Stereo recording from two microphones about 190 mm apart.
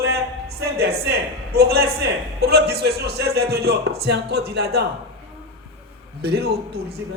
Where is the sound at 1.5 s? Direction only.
55° right (ahead or behind).